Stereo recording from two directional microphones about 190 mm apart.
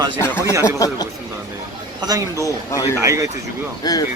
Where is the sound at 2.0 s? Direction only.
20° right (ahead or behind).